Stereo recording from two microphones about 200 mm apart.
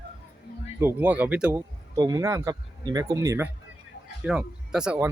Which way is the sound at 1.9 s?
20° right (ahead or behind).